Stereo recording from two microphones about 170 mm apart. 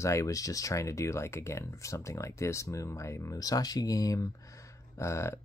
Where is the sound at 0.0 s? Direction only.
20° left (ahead or behind).